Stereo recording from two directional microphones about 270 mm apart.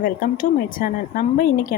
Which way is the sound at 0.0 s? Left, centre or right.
Left.